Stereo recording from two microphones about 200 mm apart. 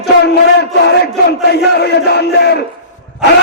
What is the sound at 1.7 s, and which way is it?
Speech, 55° left (ahead or behind).